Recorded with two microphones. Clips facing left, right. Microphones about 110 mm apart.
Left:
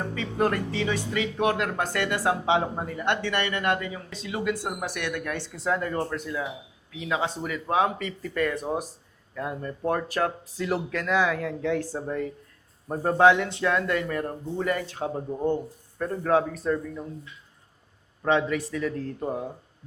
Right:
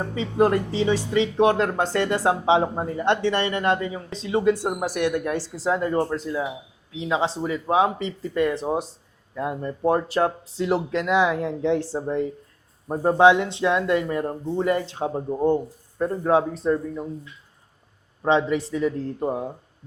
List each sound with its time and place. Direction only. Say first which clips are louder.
0.0 s speech: right 5 dB; 25° right (ahead or behind)
18.2 s speech: right 3 dB; 25° right (ahead or behind)